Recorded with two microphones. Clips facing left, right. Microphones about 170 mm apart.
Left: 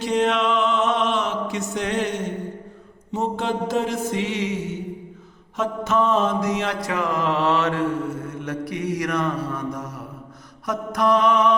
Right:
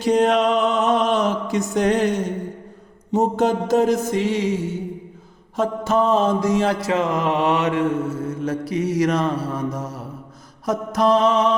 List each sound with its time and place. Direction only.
0.0 s mantra: 40° right (ahead or behind)
5.5 s mantra: 35° right (ahead or behind); by 7.9 s 20° right (ahead or behind)
8.3 s mantra: 30° right (ahead or behind)